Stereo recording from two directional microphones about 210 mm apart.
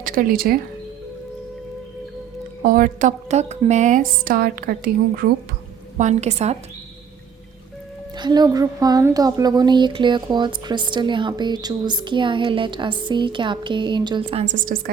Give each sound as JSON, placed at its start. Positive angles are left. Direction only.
{"t": 0.0, "sound": "speech", "side_deg": -40}
{"t": 2.6, "sound": "speech", "side_deg": -40}
{"t": 6.0, "sound": "speech", "side_deg": -35}
{"t": 8.1, "sound": "speech", "side_deg": -20}